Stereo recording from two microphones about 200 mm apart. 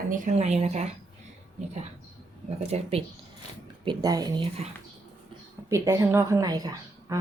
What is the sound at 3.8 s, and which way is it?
Speech, 20° right (ahead or behind).